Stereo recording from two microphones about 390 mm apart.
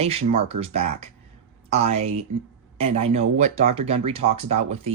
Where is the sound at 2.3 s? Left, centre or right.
Right.